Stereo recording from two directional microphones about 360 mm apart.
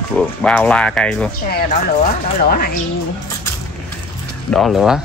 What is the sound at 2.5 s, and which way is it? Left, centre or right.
Speech, left.